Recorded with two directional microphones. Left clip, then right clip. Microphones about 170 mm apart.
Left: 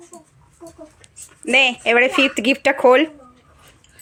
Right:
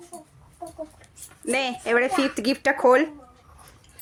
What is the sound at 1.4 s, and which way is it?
Speech, 15° left (ahead or behind).